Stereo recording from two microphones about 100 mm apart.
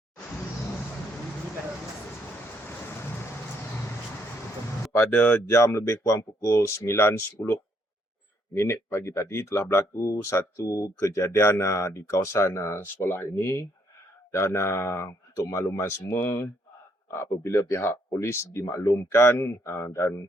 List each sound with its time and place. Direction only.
4.9 s speech: 20° left (ahead or behind)
8.5 s speech: 25° left (ahead or behind)